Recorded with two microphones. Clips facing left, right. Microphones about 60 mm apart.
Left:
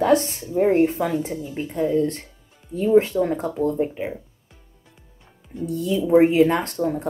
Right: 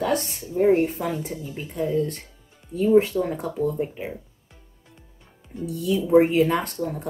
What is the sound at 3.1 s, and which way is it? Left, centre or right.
Speech, left.